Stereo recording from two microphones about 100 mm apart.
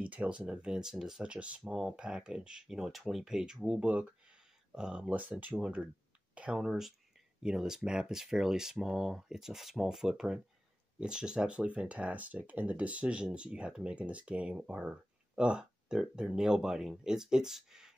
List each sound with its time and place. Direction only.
0.0 s speech: 15° right (ahead or behind)
3.8 s speech: 15° right (ahead or behind)